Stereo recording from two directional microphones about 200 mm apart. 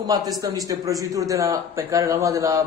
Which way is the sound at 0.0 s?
20° right (ahead or behind).